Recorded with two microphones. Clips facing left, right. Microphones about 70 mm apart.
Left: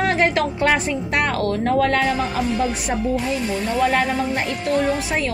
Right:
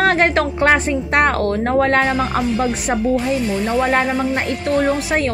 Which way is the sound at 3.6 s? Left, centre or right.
Right.